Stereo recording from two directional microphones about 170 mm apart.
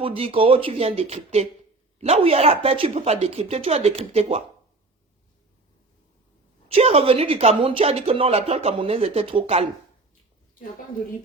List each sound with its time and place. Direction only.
0.0 s speech: 35° right (ahead or behind)
6.7 s speech: 35° right (ahead or behind)